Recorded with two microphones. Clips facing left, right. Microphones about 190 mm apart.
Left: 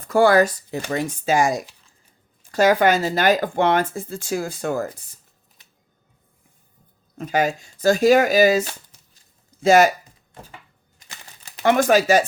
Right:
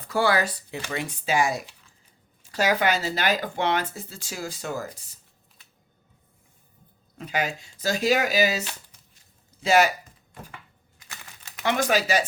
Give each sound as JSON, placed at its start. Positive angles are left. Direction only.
{"t": 0.0, "sound": "speech", "side_deg": 50}
{"t": 7.2, "sound": "speech", "side_deg": 45}
{"t": 11.6, "sound": "speech", "side_deg": 50}